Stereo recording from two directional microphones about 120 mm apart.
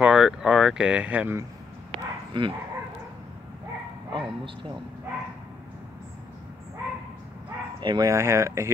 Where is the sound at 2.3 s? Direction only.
40° right (ahead or behind).